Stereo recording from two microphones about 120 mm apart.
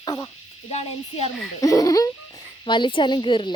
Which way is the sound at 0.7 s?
65° left (ahead or behind).